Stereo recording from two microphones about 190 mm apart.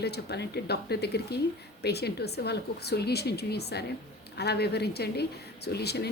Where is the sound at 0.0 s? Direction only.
60° left (ahead or behind).